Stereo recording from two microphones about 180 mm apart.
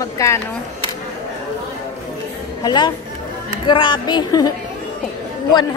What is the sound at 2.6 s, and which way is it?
A woman's voice, 25° left (ahead or behind).